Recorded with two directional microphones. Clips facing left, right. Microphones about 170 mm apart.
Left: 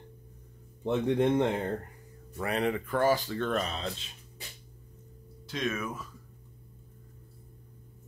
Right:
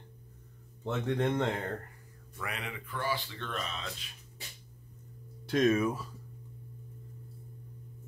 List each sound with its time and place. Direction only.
0.8 s speech: 15° left (ahead or behind)
2.3 s speech: 35° left (ahead or behind)
5.7 s speech: 30° right (ahead or behind)